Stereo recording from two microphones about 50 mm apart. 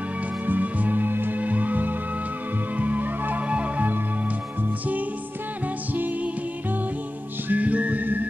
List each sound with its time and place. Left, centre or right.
0.5 s music: right
5.9 s music: right
7.4 s music: right